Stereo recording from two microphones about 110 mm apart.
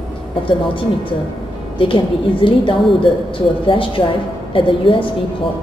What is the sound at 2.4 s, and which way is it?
A woman's voice, 50° left (ahead or behind).